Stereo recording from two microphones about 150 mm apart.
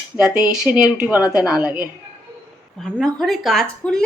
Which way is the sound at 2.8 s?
Centre (ahead or behind).